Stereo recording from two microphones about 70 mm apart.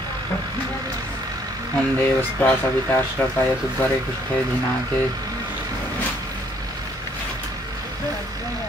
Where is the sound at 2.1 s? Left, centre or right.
Left.